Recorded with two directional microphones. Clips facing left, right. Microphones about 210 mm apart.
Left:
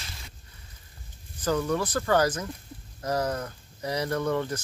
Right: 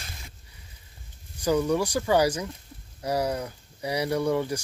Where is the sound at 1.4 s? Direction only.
15° right (ahead or behind).